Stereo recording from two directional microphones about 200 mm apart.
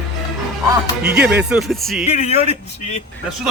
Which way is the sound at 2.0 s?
30° left (ahead or behind).